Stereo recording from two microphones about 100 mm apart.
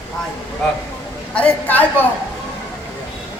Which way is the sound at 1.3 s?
15° left (ahead or behind).